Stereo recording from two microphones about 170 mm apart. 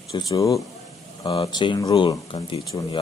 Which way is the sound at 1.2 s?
30° left (ahead or behind).